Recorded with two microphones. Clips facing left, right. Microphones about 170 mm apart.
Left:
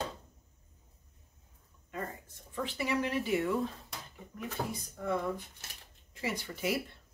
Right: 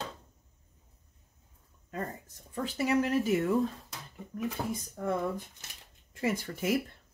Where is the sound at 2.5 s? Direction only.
40° right (ahead or behind).